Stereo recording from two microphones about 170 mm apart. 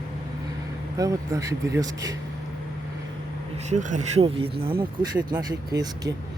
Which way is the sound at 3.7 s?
45° right (ahead or behind).